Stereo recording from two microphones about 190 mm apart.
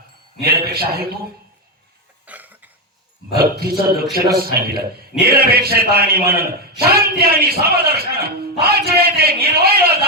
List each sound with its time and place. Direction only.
0.4 s a man's voice: 55° right (ahead or behind)
2.2 s cough: 10° right (ahead or behind)
3.6 s a man's voice: 55° right (ahead or behind)